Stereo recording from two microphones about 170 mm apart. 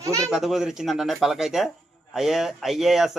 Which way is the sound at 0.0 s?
20° right (ahead or behind).